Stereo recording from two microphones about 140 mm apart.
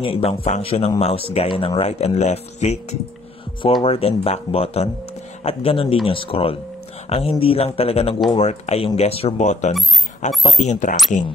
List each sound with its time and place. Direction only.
0.0 s speech: 45° left (ahead or behind)
10.3 s speech: centre (ahead or behind)
10.6 s speech: 60° left (ahead or behind)